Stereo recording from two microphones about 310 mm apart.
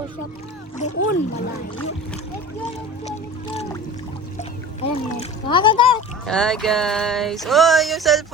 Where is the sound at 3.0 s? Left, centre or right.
Left.